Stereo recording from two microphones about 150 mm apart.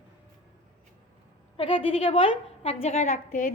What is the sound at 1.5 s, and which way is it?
A woman's voice, 40° left (ahead or behind).